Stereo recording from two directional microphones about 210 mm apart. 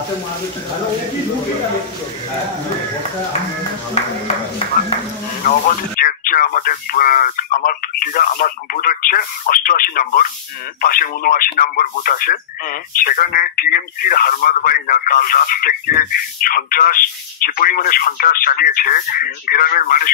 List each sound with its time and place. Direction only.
5.4 s speech: 40° left (ahead or behind)